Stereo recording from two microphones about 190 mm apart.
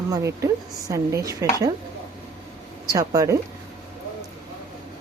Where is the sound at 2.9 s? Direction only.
20° right (ahead or behind).